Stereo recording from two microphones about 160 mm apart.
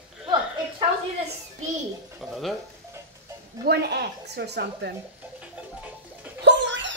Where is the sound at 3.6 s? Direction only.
90° right.